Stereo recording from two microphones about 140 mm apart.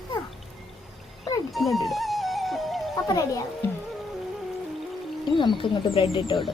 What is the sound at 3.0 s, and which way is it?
Speech, 25° left (ahead or behind).